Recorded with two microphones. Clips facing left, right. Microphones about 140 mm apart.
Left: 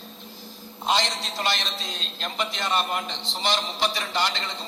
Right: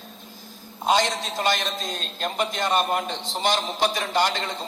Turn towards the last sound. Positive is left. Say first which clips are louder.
# right 4 dB
turn(degrees=-50)  # may be behind; listen again after turning